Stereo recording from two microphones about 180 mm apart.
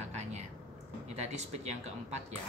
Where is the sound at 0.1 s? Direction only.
40° right (ahead or behind).